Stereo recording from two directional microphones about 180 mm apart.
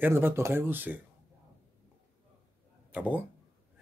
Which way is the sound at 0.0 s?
15° right (ahead or behind).